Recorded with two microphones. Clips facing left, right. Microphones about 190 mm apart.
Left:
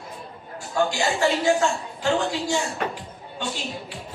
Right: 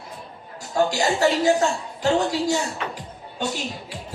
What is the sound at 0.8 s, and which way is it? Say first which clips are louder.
A man's voice: right 2 dB; 40° right (ahead or behind).